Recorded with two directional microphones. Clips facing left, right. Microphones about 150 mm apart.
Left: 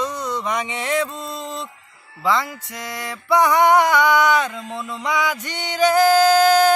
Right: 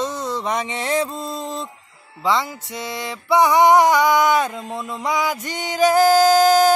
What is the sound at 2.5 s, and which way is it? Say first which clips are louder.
Music: right 3 dB; 25° right (ahead or behind).